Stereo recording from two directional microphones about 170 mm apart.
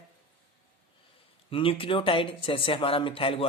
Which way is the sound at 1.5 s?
30° left (ahead or behind).